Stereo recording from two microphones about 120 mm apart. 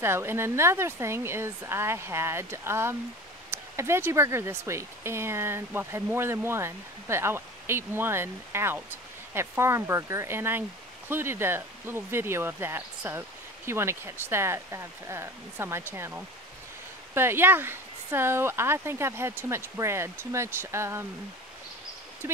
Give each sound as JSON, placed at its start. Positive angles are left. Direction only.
{"t": 0.0, "sound": "speech", "side_deg": -20}